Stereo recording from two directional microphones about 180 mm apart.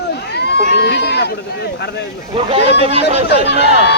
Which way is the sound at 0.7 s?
70° left (ahead or behind).